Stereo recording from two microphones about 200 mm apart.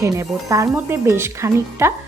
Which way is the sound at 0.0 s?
15° right (ahead or behind).